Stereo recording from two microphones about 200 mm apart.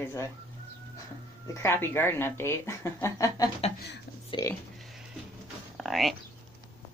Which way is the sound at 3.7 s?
55° left (ahead or behind).